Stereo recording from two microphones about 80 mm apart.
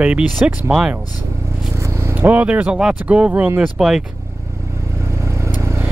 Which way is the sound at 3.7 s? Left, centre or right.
Centre.